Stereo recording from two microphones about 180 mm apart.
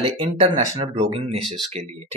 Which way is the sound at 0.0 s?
30° right (ahead or behind).